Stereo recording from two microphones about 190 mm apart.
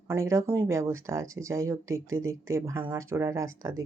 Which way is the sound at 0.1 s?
15° right (ahead or behind).